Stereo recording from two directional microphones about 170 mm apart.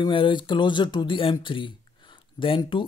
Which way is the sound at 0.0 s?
30° left (ahead or behind).